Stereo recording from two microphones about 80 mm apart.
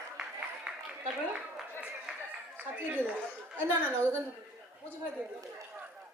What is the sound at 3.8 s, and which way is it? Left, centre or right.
Speech, right.